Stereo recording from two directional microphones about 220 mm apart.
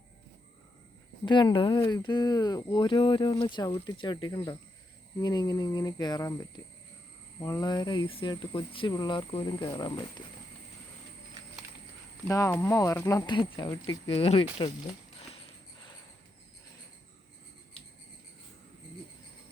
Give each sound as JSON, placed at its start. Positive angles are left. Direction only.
{"t": 1.2, "sound": "speech", "side_deg": 20}
{"t": 7.3, "sound": "speech", "side_deg": 15}
{"t": 12.3, "sound": "speech", "side_deg": 15}